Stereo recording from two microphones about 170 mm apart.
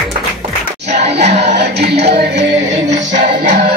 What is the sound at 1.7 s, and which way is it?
Music, 75° right (ahead or behind).